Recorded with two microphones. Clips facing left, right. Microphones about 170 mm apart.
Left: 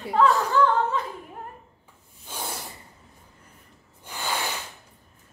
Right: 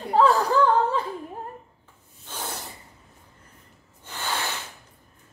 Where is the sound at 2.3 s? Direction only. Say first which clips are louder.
Even; 10° left (ahead or behind).